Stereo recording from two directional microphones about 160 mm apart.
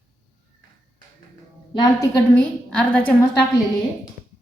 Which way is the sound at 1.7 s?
25° left (ahead or behind).